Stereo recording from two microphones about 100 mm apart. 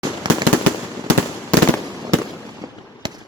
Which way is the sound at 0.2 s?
50° right (ahead or behind).